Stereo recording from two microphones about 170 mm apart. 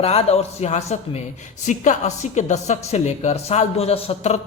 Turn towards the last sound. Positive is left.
turn(degrees=40)  # may be behind; listen again after turning